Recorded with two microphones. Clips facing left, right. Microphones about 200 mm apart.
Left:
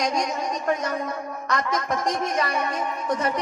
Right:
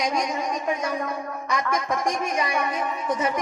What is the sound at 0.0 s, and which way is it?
A woman's voice, 5° right (ahead or behind).